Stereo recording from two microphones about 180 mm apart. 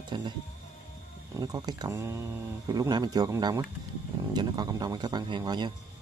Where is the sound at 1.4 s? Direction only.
20° right (ahead or behind).